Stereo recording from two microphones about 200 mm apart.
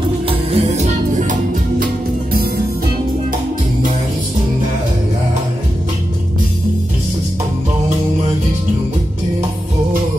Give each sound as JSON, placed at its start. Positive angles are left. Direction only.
{"t": 0.3, "sound": "music", "side_deg": -30}